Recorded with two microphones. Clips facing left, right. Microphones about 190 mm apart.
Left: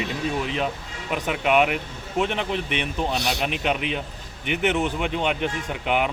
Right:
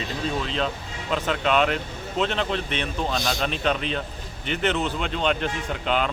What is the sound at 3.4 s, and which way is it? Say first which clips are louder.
Speech: even; 15° left (ahead or behind).